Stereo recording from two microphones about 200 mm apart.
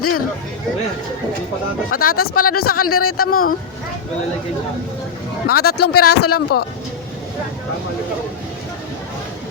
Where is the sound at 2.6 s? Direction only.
90° left.